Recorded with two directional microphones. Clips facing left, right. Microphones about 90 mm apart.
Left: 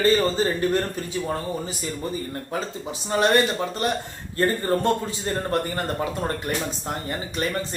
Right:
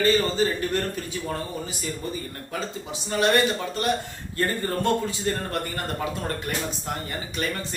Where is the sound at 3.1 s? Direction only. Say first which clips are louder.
Left 2 dB; 30° left (ahead or behind).